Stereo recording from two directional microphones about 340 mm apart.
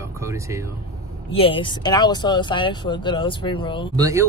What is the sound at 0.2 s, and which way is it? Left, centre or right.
Speech, centre.